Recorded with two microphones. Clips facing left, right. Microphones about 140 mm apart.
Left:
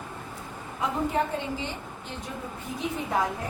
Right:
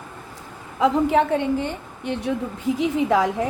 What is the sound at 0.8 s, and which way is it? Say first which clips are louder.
A woman's voice: right 9 dB; 85° right.